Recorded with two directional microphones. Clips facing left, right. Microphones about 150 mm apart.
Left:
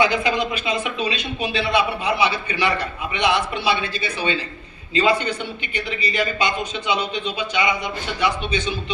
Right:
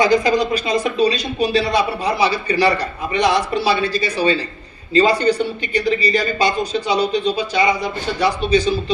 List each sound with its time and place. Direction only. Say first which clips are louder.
0.0 s speech: right 5 dB; 40° right (ahead or behind)